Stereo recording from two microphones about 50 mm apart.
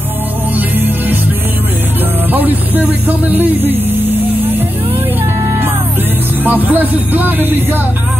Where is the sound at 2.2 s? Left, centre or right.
Right.